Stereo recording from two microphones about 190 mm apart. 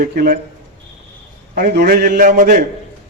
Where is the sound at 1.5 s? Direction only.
50° right (ahead or behind).